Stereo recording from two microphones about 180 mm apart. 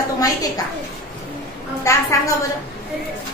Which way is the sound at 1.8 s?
15° left (ahead or behind).